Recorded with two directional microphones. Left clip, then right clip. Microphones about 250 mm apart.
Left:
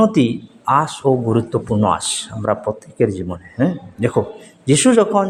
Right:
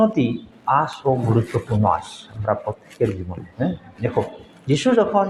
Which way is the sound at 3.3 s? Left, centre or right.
Left.